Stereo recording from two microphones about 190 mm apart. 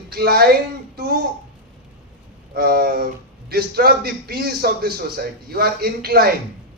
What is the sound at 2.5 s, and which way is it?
A man's voice, 50° right (ahead or behind).